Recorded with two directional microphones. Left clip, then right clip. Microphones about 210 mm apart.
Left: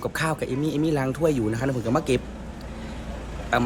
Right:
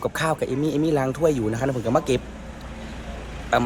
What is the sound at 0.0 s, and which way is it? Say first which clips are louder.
A man's voice: right 3 dB; 5° left (ahead or behind).